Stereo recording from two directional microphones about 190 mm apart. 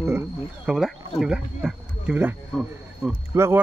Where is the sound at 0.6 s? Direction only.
Centre (ahead or behind).